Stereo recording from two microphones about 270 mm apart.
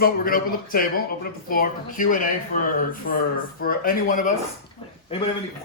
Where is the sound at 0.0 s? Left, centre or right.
Left.